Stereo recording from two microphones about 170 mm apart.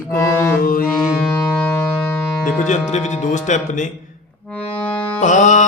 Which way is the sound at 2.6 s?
45° left (ahead or behind).